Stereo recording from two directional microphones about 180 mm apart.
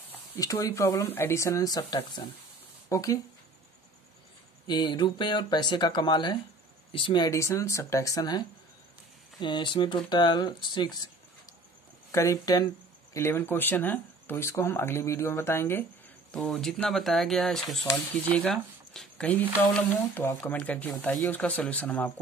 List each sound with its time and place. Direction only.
0.1 s speech: 15° left (ahead or behind)
4.6 s speech: 25° left (ahead or behind)
12.1 s speech: 15° left (ahead or behind)